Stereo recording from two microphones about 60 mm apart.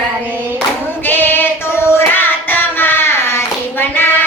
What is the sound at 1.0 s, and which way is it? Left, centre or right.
Female singing, left.